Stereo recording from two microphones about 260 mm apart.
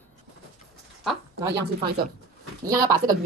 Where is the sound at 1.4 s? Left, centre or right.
Right.